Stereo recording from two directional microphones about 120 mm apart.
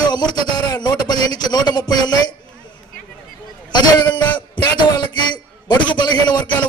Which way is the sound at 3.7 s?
40° left (ahead or behind).